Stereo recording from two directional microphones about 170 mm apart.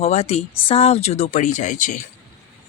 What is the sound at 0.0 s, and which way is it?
Speech, 40° left (ahead or behind).